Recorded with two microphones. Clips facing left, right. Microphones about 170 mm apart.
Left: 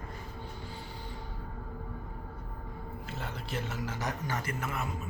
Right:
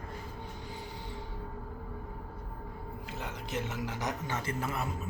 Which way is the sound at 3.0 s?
15° right (ahead or behind).